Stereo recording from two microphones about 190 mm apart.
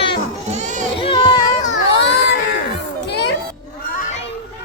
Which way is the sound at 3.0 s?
65° left (ahead or behind).